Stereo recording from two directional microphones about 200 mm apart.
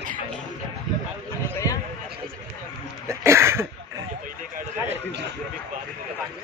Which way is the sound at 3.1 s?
15° right (ahead or behind).